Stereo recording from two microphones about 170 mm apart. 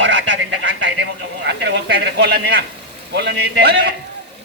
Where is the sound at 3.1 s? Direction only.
80° right.